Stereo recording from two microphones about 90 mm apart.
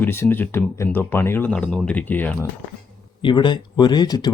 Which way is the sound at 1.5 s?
10° left (ahead or behind).